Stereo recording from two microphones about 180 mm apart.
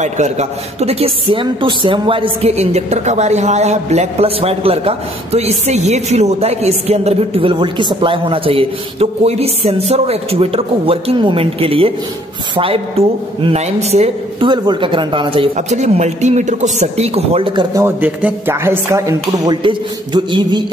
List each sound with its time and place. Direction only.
0.0 s a man's voice: 40° right (ahead or behind)
15.5 s a man's voice: 40° right (ahead or behind)
17.8 s a man's voice: 10° right (ahead or behind)